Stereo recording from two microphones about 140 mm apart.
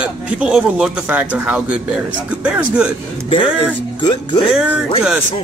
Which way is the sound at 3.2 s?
40° left (ahead or behind).